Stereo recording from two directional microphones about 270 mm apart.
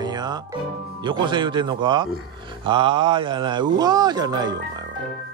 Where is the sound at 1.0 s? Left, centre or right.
Centre.